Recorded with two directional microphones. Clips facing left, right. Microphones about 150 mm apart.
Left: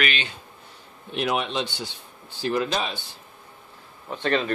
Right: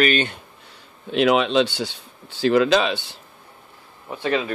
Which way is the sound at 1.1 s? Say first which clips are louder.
Right 8 dB; 90° right.